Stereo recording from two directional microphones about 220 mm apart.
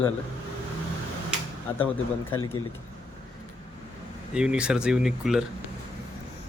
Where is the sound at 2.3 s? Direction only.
20° left (ahead or behind).